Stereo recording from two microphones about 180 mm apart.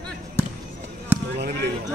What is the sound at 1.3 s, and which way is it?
Speech, 70° right (ahead or behind).